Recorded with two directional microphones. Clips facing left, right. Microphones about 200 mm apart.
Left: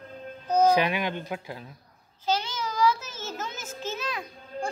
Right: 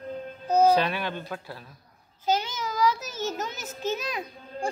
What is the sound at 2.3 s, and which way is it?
Child singing, 15° right (ahead or behind).